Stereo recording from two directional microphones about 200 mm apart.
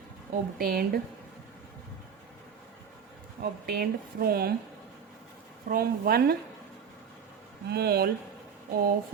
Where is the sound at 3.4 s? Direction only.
50° right (ahead or behind).